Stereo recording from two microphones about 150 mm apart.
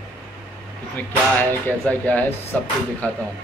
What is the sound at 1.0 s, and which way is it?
Speech, 10° left (ahead or behind).